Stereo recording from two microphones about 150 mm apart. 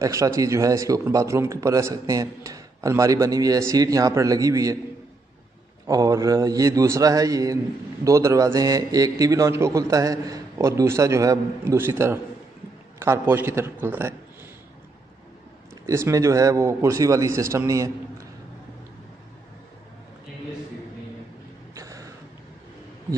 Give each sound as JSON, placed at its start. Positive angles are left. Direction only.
{"t": 0.0, "sound": "a man's voice", "side_deg": -20}
{"t": 5.9, "sound": "a man's voice", "side_deg": -25}
{"t": 15.9, "sound": "a man's voice", "side_deg": -20}
{"t": 21.7, "sound": "a sound", "side_deg": -20}